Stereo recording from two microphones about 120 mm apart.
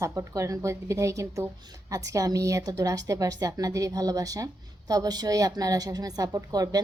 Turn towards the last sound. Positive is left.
turn(degrees=-30)  # may be behind; listen again after turning